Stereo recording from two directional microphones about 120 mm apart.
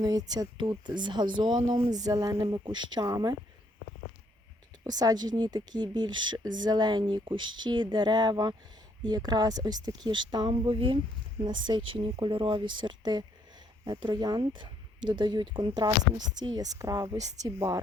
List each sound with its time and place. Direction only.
0.0 s speech: 30° right (ahead or behind)
4.8 s a woman's voice: 35° right (ahead or behind)